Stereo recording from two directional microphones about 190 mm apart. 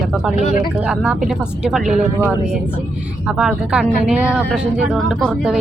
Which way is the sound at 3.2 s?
5° right (ahead or behind).